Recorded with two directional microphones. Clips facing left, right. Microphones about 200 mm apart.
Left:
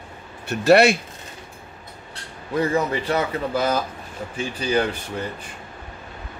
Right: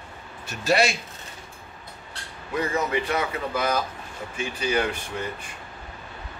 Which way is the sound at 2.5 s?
35° left (ahead or behind).